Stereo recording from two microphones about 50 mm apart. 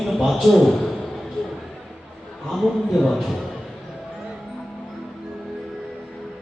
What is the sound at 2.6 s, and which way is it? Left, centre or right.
Speech, centre.